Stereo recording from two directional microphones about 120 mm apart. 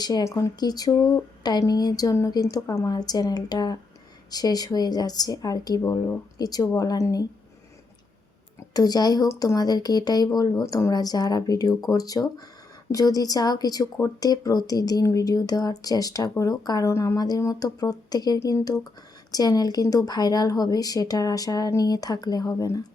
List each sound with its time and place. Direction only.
0.0 s speech: 35° left (ahead or behind)
5.8 s speech: 20° left (ahead or behind)
6.4 s speech: 30° left (ahead or behind)
8.7 s speech: 30° left (ahead or behind)